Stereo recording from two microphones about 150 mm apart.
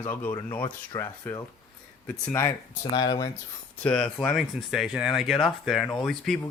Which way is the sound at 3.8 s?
10° left (ahead or behind).